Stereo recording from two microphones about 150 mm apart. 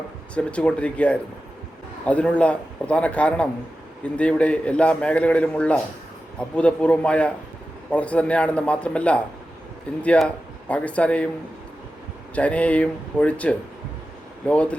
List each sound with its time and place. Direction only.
0.3 s a man's voice: 10° left (ahead or behind)
12.3 s a man's voice: 10° left (ahead or behind)